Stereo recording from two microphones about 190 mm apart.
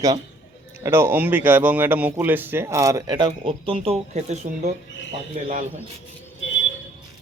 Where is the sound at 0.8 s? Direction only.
10° right (ahead or behind); by 4.7 s 35° right (ahead or behind).